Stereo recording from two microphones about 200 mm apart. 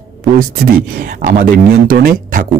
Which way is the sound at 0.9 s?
50° right (ahead or behind).